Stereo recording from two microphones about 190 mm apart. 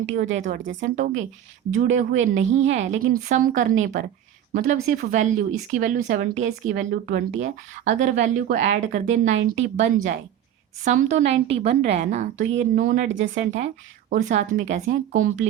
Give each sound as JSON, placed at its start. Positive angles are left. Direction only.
{"t": 0.3, "sound": "speech", "side_deg": -45}